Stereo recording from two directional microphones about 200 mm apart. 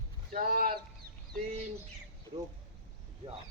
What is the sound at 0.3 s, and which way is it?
Speech, 45° right (ahead or behind).